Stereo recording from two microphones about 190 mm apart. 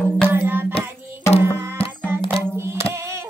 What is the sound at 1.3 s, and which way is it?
Music, 30° left (ahead or behind).